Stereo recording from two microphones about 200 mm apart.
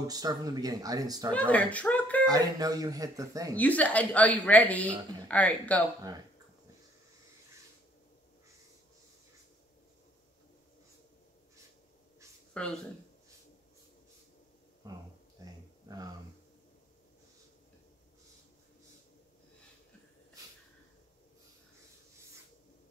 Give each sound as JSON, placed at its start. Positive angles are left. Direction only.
{"t": 0.0, "sound": "speech", "side_deg": -20}
{"t": 1.5, "sound": "speech", "side_deg": 5}
{"t": 2.2, "sound": "speech", "side_deg": -20}
{"t": 3.5, "sound": "a woman's voice", "side_deg": 5}
{"t": 12.6, "sound": "speech", "side_deg": 5}